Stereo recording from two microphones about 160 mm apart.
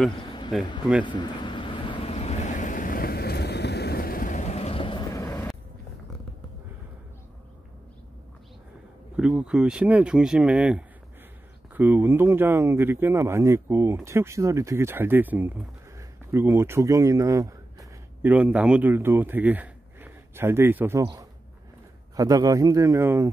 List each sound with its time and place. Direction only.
1.0 s vehicle: 30° left (ahead or behind)
5.1 s vehicle: 20° left (ahead or behind)
9.1 s speech: 5° right (ahead or behind)
18.3 s a man's voice: 10° right (ahead or behind)